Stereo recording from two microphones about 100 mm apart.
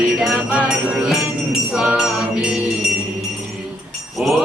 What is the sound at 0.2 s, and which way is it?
Music, 10° right (ahead or behind).